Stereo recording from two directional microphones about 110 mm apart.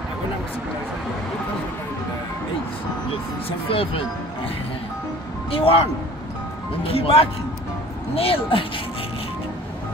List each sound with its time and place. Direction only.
3.4 s speech: 55° left (ahead or behind)
5.5 s speech: 60° left (ahead or behind)